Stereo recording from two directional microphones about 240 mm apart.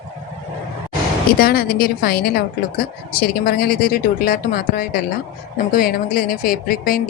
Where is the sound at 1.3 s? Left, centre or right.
Left.